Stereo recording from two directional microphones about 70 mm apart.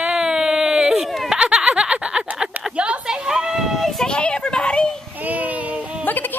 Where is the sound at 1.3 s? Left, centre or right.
Centre.